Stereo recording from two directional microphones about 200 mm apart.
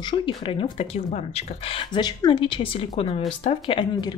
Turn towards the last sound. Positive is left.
turn(degrees=30)  # may be behind; listen again after turning